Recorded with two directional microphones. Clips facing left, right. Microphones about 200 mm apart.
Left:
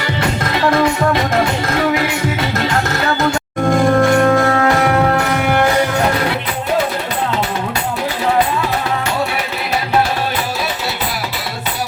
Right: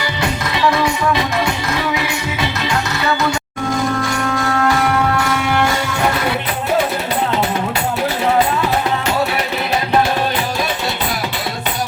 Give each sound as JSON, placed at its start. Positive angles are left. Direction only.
{"t": 0.4, "sound": "music", "side_deg": 50}